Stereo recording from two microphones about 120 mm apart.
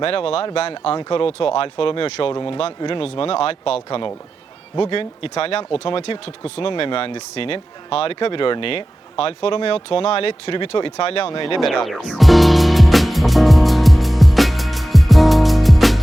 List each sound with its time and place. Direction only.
0.0 s speech: 50° left (ahead or behind)
4.8 s speech: 50° left (ahead or behind)
11.6 s music: centre (ahead or behind)